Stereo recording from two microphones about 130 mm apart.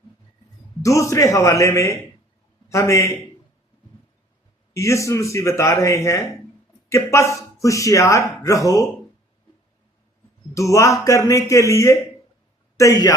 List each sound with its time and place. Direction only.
0.8 s a man's voice: 25° left (ahead or behind)
4.7 s speech: 25° left (ahead or behind)
10.5 s a man's voice: 25° left (ahead or behind)